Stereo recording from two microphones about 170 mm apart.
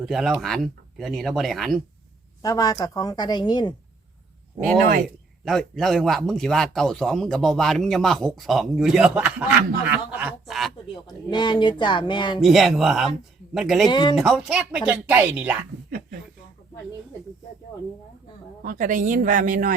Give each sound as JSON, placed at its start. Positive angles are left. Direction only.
{"t": 0.0, "sound": "a man's voice", "side_deg": 0}
{"t": 2.4, "sound": "a woman's voice", "side_deg": 20}
{"t": 5.0, "sound": "a man's voice", "side_deg": 0}
{"t": 11.0, "sound": "a woman's voice", "side_deg": 25}
{"t": 12.4, "sound": "a man's voice", "side_deg": 0}
{"t": 13.8, "sound": "a woman's voice", "side_deg": 25}
{"t": 14.2, "sound": "a man's voice", "side_deg": 0}
{"t": 18.6, "sound": "speech", "side_deg": -55}